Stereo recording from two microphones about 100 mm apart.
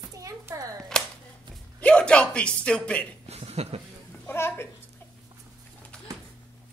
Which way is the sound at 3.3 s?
90° right.